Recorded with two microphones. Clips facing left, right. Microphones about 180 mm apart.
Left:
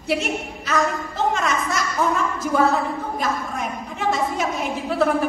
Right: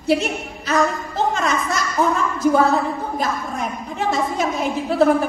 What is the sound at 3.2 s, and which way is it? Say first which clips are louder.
A woman's voice: right 1 dB; 35° right (ahead or behind).